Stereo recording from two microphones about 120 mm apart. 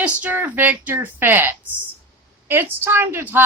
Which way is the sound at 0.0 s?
15° right (ahead or behind).